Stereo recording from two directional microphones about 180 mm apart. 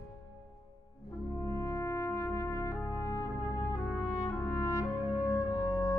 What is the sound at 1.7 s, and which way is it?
Brass instrument, 15° left (ahead or behind).